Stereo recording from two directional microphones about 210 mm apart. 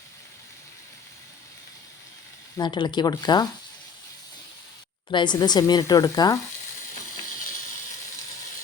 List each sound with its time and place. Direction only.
2.6 s speech: 20° left (ahead or behind)
5.1 s speech: 20° left (ahead or behind)